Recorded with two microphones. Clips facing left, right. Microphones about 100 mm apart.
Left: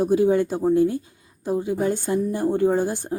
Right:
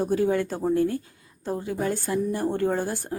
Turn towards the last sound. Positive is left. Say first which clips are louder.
# left 5 dB
turn(degrees=20)  # may be behind; listen again after turning